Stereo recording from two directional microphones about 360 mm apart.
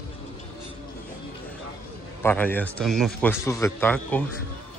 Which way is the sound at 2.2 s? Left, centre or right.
Centre.